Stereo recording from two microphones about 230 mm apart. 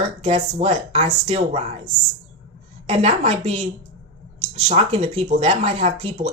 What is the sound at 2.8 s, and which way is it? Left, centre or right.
Speech, right.